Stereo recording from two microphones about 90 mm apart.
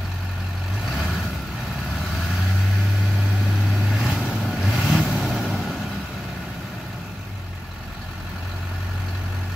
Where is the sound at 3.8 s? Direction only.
Centre (ahead or behind).